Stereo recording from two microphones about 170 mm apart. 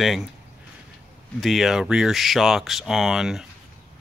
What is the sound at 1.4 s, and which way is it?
Speech, centre (ahead or behind).